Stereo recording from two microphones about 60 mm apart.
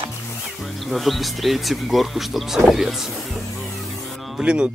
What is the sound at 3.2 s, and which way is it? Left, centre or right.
Music, centre.